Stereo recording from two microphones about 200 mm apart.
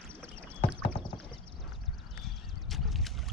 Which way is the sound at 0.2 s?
5° left (ahead or behind).